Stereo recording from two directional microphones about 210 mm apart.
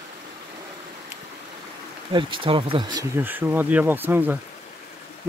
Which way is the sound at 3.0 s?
10° right (ahead or behind).